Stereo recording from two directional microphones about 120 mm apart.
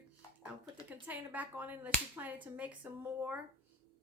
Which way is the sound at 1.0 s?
15° right (ahead or behind).